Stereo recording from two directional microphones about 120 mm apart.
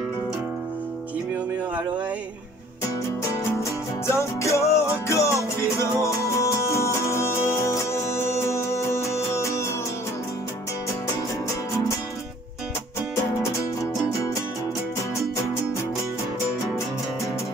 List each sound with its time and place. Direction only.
4.1 s music: 25° left (ahead or behind)
13.1 s music: 25° left (ahead or behind)